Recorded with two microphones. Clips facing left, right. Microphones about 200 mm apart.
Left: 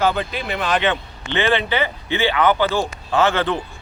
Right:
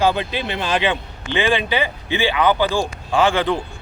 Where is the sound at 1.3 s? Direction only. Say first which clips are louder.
Even; 15° right (ahead or behind).